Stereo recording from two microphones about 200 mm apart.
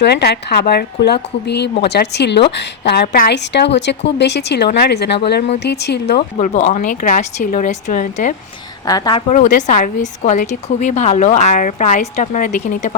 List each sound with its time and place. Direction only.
0.0 s a woman's voice: 55° left (ahead or behind)
6.4 s a woman's voice: 35° left (ahead or behind)
8.9 s speech: 20° left (ahead or behind)
9.3 s a woman's voice: 40° left (ahead or behind)